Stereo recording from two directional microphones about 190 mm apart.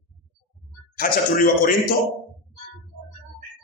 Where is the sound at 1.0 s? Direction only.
50° left (ahead or behind).